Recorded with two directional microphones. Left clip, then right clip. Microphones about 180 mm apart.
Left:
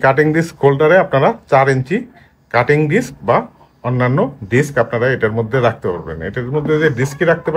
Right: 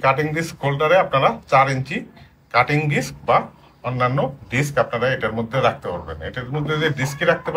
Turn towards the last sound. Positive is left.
turn(degrees=65)  # may be behind; listen again after turning